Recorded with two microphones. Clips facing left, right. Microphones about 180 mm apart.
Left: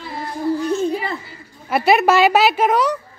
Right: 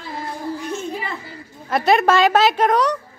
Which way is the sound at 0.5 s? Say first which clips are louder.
Left 7 dB; 35° left (ahead or behind).